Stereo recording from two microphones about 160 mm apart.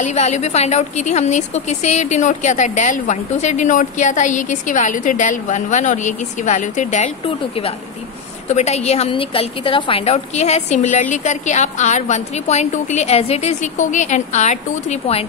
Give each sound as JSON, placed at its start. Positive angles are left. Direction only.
{"t": 0.0, "sound": "a woman's voice", "side_deg": 45}
{"t": 7.2, "sound": "a woman's voice", "side_deg": 35}